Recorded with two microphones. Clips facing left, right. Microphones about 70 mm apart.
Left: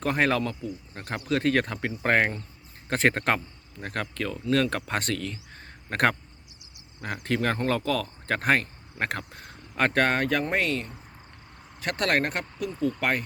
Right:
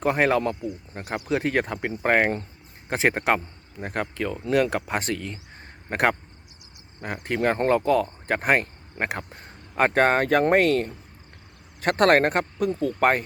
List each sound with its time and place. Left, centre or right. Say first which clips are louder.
0.0 s speech: right 3 dB; centre
7.3 s speech: right 5 dB; centre
10.2 s speech: right 7 dB; right